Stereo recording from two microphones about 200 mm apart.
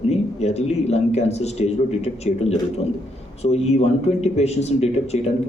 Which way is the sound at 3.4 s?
30° left (ahead or behind).